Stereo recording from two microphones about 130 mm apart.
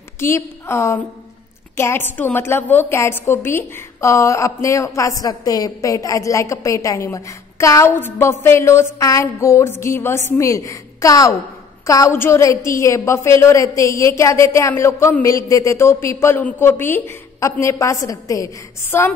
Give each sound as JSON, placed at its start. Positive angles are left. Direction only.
{"t": 0.2, "sound": "a woman's voice", "side_deg": 20}